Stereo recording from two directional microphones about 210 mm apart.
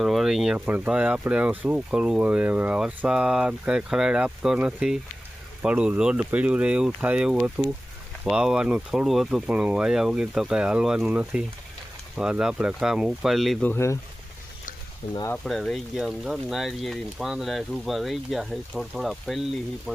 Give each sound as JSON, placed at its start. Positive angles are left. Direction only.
{"t": 0.0, "sound": "speech", "side_deg": 0}
{"t": 15.1, "sound": "speech", "side_deg": 15}
{"t": 15.4, "sound": "speech", "side_deg": 0}